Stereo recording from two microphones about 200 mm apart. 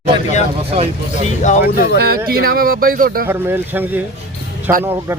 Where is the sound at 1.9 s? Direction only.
50° right (ahead or behind).